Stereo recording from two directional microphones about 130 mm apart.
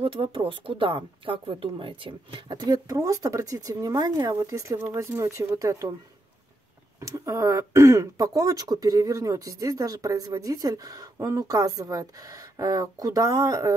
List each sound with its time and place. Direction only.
0.0 s a woman's voice: 45° right (ahead or behind); by 5.9 s 25° right (ahead or behind)
7.0 s speech: 25° right (ahead or behind)